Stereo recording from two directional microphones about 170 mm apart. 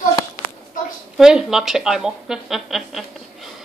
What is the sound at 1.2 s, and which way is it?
Speech, 5° right (ahead or behind).